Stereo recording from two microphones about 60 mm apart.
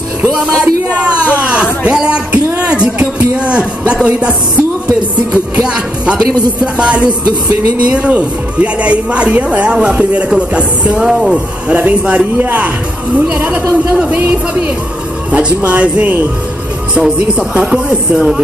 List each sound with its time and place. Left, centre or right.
0.5 s speech: left
1.4 s a sound: centre
3.3 s music: centre
6.6 s speech: centre
11.1 s speech: centre
11.3 s speech: right
15.3 s speech: right
17.6 s speech: centre